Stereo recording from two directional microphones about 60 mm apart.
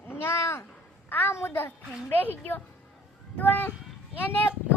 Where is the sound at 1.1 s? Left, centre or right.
Left.